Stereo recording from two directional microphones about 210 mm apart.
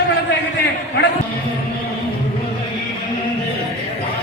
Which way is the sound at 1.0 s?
50° left (ahead or behind).